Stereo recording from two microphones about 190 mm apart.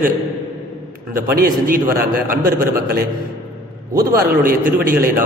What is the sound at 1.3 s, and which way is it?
A man's voice, 50° right (ahead or behind).